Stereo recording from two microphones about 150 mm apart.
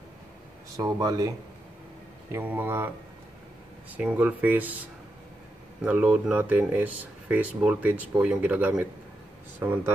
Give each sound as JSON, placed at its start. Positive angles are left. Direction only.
{"t": 0.7, "sound": "speech", "side_deg": -25}
{"t": 2.3, "sound": "speech", "side_deg": -15}
{"t": 3.9, "sound": "speech", "side_deg": -10}
{"t": 5.9, "sound": "speech", "side_deg": -10}